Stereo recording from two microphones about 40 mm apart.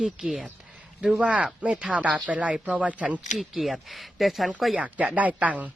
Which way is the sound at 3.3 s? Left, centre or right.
Centre.